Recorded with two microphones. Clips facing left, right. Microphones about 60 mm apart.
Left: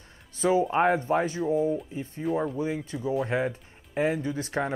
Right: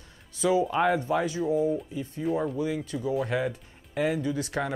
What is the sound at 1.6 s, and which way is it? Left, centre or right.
Speech, centre.